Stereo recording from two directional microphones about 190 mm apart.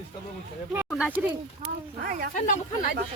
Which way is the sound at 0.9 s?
5° right (ahead or behind).